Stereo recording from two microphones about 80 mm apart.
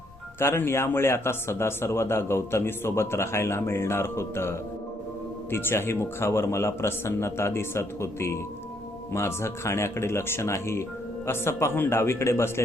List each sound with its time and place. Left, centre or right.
0.3 s speech: left